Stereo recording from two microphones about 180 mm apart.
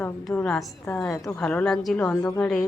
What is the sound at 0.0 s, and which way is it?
Speech, 5° left (ahead or behind).